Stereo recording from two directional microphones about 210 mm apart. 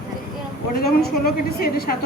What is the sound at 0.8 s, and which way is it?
A woman's voice, 45° left (ahead or behind).